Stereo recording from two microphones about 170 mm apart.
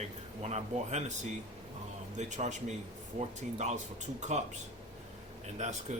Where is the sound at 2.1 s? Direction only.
45° right (ahead or behind).